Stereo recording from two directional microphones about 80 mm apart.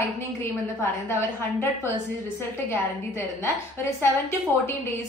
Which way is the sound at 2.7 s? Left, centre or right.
Left.